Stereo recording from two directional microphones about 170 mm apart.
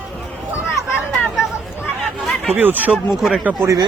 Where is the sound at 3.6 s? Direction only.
20° right (ahead or behind).